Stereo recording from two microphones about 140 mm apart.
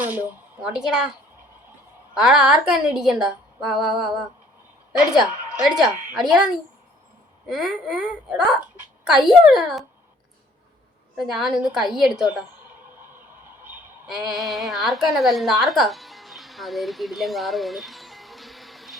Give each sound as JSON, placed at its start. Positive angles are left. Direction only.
{"t": 0.0, "sound": "a woman's voice", "side_deg": -15}
{"t": 2.1, "sound": "a woman's voice", "side_deg": -5}
{"t": 11.2, "sound": "a woman's voice", "side_deg": 0}
{"t": 14.3, "sound": "a woman's voice", "side_deg": 0}